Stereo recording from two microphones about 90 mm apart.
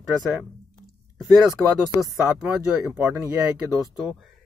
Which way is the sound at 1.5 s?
35° left (ahead or behind).